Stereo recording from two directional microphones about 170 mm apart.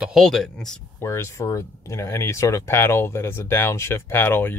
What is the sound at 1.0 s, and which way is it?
Speech, 15° left (ahead or behind).